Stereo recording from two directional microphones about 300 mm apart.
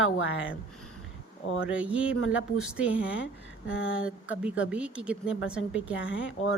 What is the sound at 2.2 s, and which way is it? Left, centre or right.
Speech, left.